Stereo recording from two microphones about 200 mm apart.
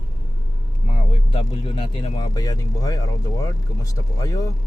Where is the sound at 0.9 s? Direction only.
30° left (ahead or behind).